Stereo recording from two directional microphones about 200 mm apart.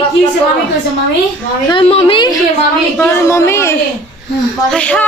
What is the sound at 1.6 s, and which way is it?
Speech, 25° left (ahead or behind).